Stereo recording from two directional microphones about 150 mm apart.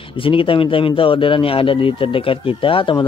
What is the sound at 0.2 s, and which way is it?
Speech, 35° left (ahead or behind).